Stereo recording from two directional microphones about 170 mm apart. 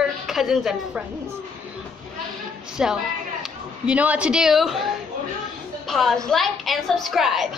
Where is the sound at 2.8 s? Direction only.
5° right (ahead or behind).